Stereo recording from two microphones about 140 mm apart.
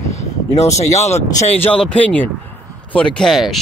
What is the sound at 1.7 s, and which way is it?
Speech, 10° left (ahead or behind).